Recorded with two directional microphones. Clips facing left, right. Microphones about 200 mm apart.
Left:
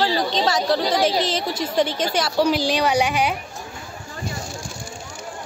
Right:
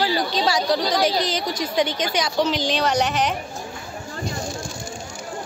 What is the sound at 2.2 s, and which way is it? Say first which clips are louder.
A woman's voice: left 3 dB; 5° left (ahead or behind).